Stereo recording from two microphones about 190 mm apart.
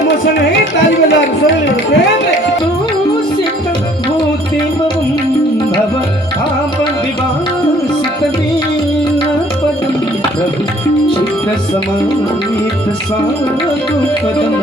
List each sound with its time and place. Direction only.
0.3 s carnatic music: 70° left (ahead or behind)